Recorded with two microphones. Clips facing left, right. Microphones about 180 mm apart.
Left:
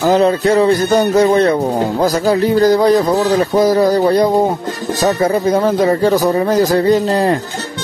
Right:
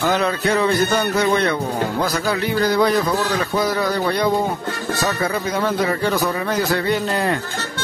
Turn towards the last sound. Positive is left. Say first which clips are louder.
# left 7 dB
turn(degrees=35)  # may be behind; listen again after turning